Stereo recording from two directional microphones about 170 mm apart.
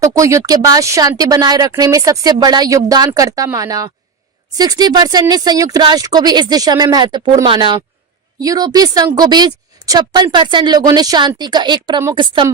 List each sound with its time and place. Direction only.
0.0 s a woman's voice: 20° right (ahead or behind)